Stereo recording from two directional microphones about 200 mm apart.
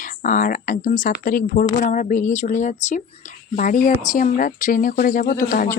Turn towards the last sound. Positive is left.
turn(degrees=45)  # may be behind; listen again after turning